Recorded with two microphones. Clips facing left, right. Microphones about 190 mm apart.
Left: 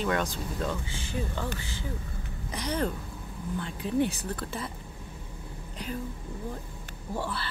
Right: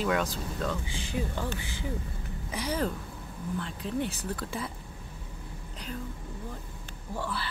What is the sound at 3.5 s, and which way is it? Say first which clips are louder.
Speech: left 5 dB; 5° left (ahead or behind).